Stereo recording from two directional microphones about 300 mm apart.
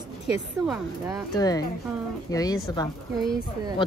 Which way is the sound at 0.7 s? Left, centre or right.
Centre.